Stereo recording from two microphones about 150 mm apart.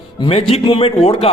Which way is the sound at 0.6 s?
35° left (ahead or behind).